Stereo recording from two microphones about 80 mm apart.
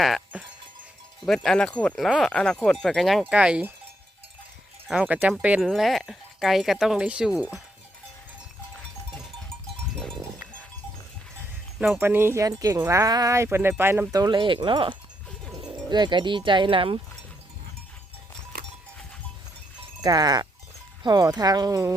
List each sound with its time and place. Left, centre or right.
0.0 s music: centre
1.2 s speech: centre
2.0 s speech: centre
3.2 s speech: centre
4.9 s speech: centre
5.5 s speech: centre
7.0 s speech: centre
11.9 s speech: right
12.4 s speech: right
13.3 s speech: right
14.1 s speech: right
15.9 s speech: right
20.0 s speech: right